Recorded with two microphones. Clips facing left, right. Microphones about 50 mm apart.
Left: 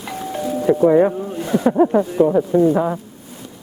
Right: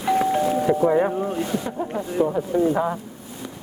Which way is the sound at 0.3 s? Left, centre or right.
Right.